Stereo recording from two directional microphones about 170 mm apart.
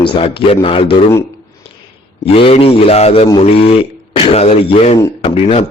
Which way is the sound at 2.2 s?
35° left (ahead or behind).